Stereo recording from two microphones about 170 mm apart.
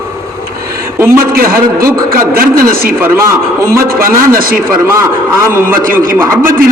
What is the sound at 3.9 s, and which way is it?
A man's voice, 60° right (ahead or behind).